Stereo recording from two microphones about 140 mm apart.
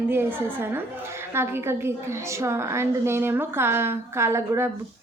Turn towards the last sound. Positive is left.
turn(degrees=-20)  # may be behind; listen again after turning